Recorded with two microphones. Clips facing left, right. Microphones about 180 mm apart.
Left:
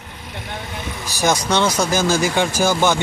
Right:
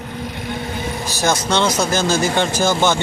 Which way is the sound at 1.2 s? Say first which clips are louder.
Left 1 dB; 15° left (ahead or behind).